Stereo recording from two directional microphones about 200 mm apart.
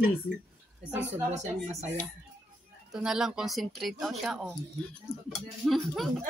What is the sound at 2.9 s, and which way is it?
Speech, 5° right (ahead or behind).